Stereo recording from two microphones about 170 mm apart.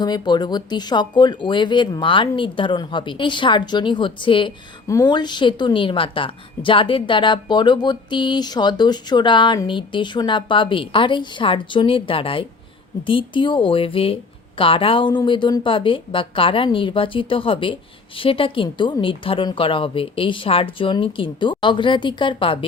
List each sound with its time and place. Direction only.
0.0 s a woman's voice: 25° left (ahead or behind)